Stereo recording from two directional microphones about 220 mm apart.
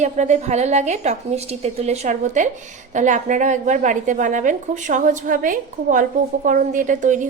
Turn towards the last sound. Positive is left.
turn(degrees=-35)  # may be behind; listen again after turning